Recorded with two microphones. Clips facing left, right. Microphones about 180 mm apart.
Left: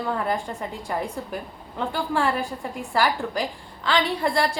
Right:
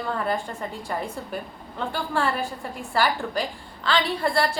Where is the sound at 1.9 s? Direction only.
15° left (ahead or behind).